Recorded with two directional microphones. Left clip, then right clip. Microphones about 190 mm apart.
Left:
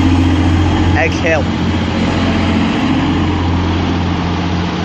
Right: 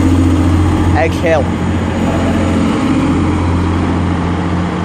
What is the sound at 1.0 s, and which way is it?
Speech, 20° right (ahead or behind).